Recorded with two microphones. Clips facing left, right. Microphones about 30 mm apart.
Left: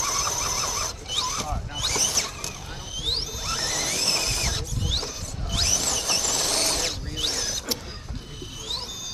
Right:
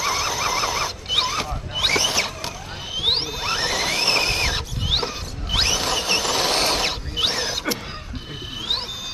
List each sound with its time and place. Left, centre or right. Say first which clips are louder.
0.0 s squeal: right 5 dB; right